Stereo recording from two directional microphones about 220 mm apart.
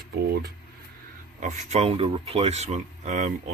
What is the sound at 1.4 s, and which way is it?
A man's voice, 30° right (ahead or behind).